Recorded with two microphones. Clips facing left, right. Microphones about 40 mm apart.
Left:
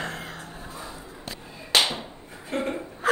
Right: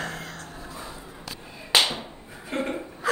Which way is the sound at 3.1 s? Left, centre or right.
Left.